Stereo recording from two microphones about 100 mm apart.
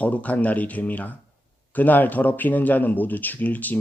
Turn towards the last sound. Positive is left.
turn(degrees=15)  # may be behind; listen again after turning